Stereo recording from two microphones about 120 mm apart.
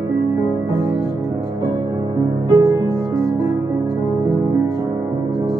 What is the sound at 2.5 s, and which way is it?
Music, 20° right (ahead or behind).